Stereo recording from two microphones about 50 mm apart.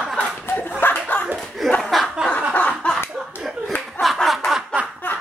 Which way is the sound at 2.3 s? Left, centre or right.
Left.